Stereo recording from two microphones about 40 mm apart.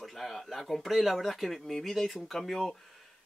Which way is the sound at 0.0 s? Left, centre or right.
Centre.